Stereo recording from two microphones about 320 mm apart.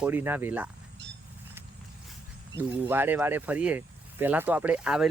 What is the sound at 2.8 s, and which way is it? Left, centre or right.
Speech, centre.